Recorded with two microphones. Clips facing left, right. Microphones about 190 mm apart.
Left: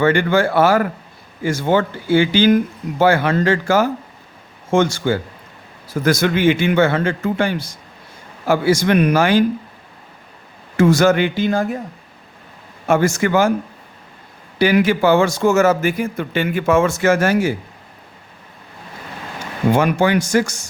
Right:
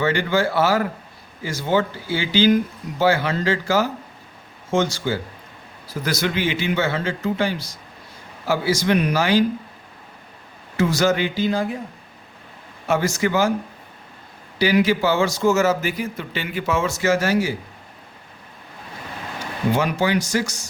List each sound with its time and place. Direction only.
0.0 s speech: 55° left (ahead or behind)
10.8 s speech: 50° left (ahead or behind)
12.9 s speech: 50° left (ahead or behind)
14.6 s speech: 55° left (ahead or behind)
19.7 s speech: 55° left (ahead or behind)